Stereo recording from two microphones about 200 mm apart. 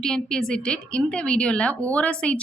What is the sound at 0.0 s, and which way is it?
A woman's voice, 5° left (ahead or behind).